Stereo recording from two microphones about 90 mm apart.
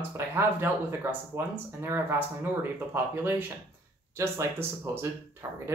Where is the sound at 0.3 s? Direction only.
25° right (ahead or behind).